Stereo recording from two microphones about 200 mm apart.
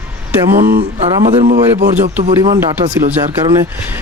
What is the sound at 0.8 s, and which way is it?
Speech, 30° right (ahead or behind).